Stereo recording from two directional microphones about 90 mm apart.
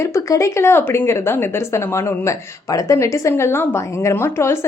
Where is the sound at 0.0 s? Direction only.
35° left (ahead or behind).